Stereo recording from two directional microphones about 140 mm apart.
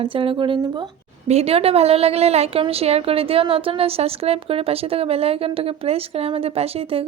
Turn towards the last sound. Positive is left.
turn(degrees=-45)  # may be behind; listen again after turning